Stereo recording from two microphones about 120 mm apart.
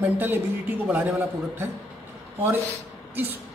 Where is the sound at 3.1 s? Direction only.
15° right (ahead or behind).